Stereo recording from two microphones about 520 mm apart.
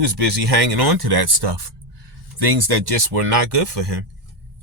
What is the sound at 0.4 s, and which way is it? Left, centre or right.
Speech, right.